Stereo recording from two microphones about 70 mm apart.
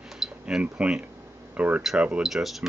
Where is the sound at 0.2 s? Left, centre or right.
Centre.